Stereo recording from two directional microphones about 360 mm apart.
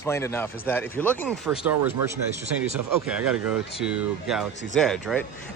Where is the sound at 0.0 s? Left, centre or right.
Centre.